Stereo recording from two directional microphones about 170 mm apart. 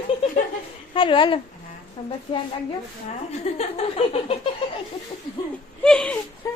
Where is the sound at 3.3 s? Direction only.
40° left (ahead or behind).